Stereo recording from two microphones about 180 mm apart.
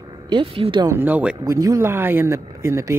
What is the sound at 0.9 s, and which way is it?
Speech, 10° right (ahead or behind).